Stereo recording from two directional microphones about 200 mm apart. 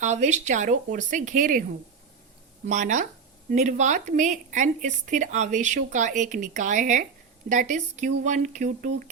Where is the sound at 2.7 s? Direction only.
40° right (ahead or behind).